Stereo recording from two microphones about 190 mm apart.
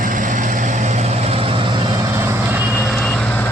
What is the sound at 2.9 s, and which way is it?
Reversing beeps, 5° left (ahead or behind).